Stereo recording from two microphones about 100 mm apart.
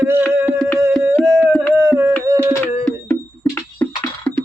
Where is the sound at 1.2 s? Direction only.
30° right (ahead or behind).